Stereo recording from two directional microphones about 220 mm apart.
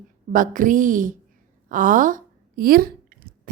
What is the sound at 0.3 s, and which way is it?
A woman's voice, 35° right (ahead or behind).